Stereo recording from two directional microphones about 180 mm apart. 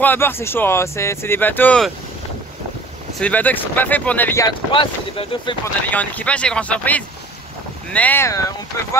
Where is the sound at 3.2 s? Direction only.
10° left (ahead or behind).